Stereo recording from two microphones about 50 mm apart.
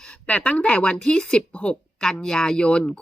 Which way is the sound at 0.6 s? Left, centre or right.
Left.